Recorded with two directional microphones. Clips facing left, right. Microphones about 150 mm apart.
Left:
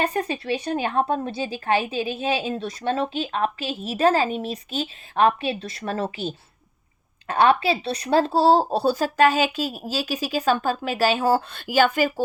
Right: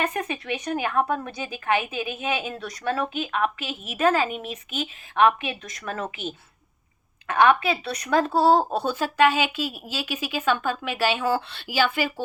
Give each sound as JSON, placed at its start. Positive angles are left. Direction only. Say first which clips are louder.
{"t": 0.0, "sound": "a woman's voice", "louder": "left 3 dB", "side_deg": 35}